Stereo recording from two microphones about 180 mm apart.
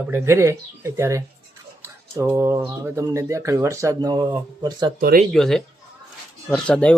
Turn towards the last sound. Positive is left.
turn(degrees=5)  # may be behind; listen again after turning